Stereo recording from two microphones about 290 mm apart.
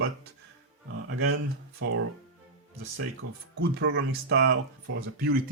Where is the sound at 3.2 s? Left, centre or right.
Right.